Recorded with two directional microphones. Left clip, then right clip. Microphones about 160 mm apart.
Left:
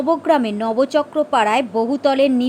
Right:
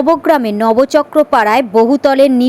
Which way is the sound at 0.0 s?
30° right (ahead or behind).